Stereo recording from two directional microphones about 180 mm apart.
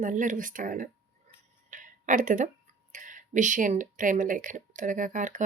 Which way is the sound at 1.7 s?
45° right (ahead or behind).